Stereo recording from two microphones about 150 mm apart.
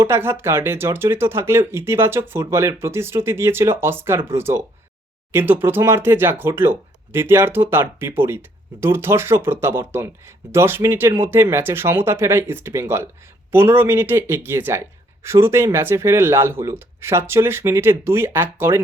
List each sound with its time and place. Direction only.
0.0 s speech: 15° right (ahead or behind)